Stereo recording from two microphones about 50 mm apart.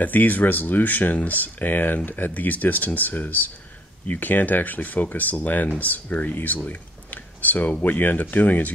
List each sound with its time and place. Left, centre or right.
0.0 s speech: left